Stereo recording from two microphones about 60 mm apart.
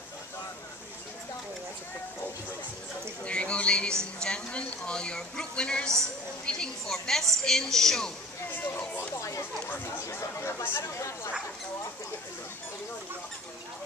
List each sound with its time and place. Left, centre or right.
3.3 s a sound: centre
4.0 s speech: centre
8.5 s speech: left
9.1 s speech: left